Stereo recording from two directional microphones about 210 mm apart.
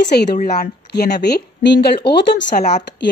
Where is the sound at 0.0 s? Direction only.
50° left (ahead or behind).